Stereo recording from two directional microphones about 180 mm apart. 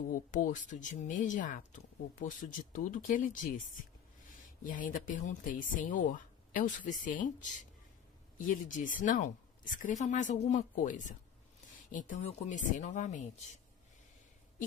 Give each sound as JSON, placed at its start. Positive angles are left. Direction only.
{"t": 0.1, "sound": "speech", "side_deg": 50}
{"t": 4.6, "sound": "speech", "side_deg": 50}